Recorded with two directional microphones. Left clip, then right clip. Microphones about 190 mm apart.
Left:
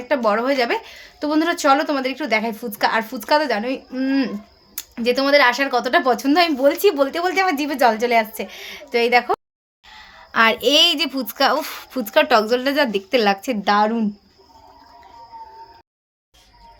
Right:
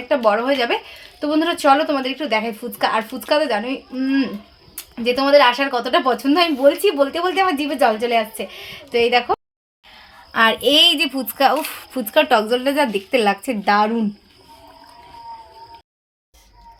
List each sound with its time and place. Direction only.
0.1 s speech: 5° left (ahead or behind)